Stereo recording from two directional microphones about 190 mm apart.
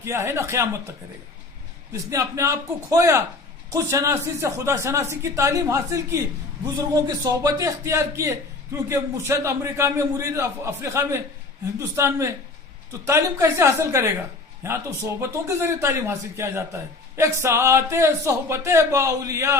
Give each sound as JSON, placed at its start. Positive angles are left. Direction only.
{"t": 0.0, "sound": "speech", "side_deg": -15}
{"t": 1.9, "sound": "speech", "side_deg": -15}